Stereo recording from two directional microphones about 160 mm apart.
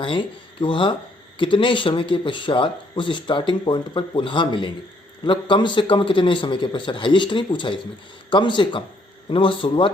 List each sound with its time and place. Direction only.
0.0 s speech: 30° left (ahead or behind)